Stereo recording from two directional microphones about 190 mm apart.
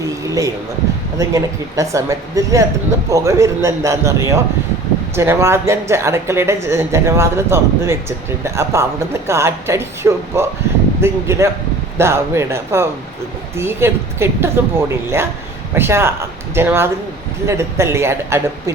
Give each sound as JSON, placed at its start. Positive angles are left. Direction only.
{"t": 0.3, "sound": "speech", "side_deg": -15}